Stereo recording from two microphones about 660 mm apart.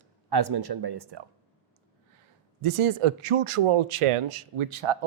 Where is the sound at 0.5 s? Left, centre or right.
Right.